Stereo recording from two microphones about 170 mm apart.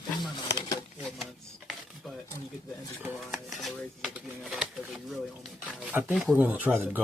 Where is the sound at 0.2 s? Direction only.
20° left (ahead or behind).